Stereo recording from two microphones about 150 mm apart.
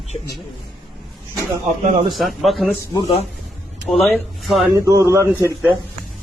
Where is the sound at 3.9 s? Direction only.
Centre (ahead or behind).